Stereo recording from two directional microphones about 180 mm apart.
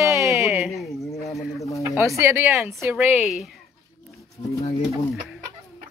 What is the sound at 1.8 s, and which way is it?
Speech, 15° right (ahead or behind).